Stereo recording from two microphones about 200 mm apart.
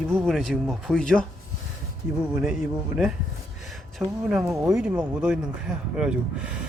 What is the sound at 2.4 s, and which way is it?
Speech, centre (ahead or behind).